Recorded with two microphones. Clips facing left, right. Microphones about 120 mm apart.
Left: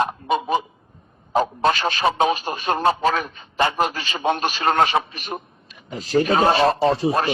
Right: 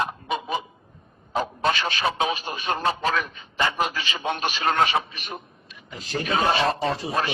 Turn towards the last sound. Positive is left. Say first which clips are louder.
# left 6 dB
turn(degrees=35)  # may be behind; listen again after turning